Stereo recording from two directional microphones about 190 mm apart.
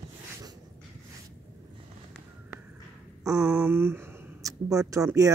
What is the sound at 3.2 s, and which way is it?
Speech, 5° right (ahead or behind).